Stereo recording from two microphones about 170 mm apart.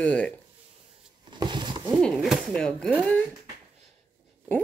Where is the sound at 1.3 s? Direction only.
25° right (ahead or behind).